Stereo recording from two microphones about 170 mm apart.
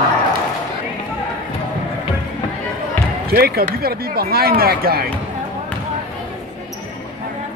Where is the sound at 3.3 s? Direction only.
65° right (ahead or behind).